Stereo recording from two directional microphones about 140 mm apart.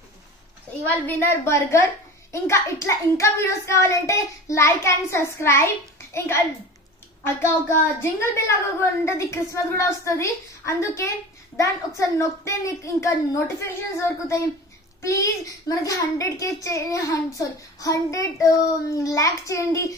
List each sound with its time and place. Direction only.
0.8 s a woman's voice: 15° left (ahead or behind)
7.4 s a child's voice: 20° left (ahead or behind)